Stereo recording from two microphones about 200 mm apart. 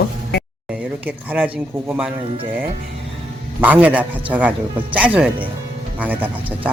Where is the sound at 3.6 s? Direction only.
10° right (ahead or behind).